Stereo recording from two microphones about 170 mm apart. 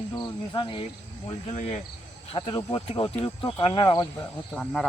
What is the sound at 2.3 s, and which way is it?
Speech, 30° left (ahead or behind).